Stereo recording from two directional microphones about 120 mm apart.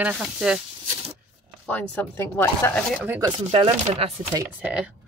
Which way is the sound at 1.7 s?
15° left (ahead or behind).